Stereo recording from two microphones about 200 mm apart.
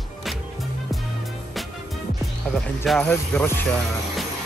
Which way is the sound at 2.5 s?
Centre (ahead or behind).